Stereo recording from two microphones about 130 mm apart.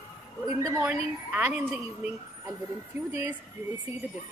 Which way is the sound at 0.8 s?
10° right (ahead or behind).